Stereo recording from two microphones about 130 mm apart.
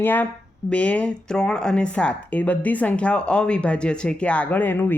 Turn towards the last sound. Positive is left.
turn(degrees=15)  # may be behind; listen again after turning